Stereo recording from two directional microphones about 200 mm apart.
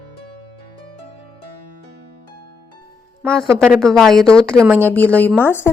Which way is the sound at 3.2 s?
5° left (ahead or behind).